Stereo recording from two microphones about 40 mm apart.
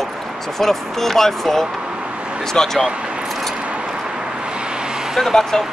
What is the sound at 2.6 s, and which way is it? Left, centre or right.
Speech, centre.